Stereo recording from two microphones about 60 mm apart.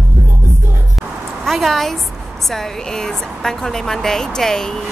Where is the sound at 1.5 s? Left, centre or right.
Centre.